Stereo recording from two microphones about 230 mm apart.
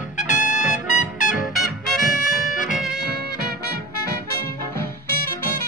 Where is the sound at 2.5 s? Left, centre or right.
Left.